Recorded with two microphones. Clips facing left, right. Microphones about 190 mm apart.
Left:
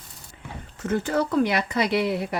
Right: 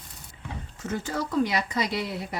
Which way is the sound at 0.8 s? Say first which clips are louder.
Left 7 dB; 60° left (ahead or behind).